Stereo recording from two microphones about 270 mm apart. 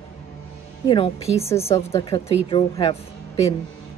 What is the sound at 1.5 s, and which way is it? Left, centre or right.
Speech, centre.